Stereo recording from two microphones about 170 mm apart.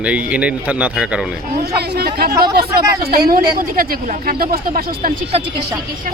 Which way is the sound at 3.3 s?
55° right (ahead or behind).